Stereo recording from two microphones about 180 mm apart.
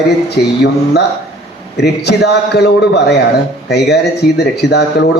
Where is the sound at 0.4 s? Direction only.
60° left (ahead or behind).